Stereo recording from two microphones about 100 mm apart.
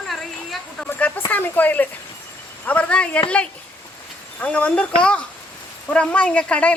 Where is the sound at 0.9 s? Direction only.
15° left (ahead or behind).